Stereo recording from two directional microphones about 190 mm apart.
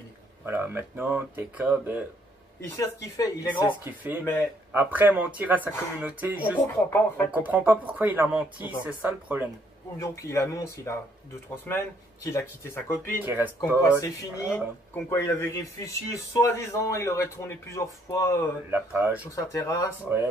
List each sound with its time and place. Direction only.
0.5 s speech: 10° right (ahead or behind)
2.6 s a man's voice: 15° left (ahead or behind)
3.8 s speech: 10° right (ahead or behind)
4.2 s a man's voice: 15° left (ahead or behind)
4.7 s speech: 10° right (ahead or behind)
9.9 s a man's voice: 15° left (ahead or behind)
13.2 s speech: 10° right (ahead or behind)
13.8 s a man's voice: 15° left (ahead or behind)
18.7 s speech: 10° right (ahead or behind)
19.3 s a man's voice: 15° left (ahead or behind)